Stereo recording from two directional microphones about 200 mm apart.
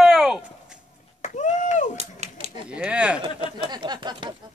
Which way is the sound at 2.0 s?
35° right (ahead or behind).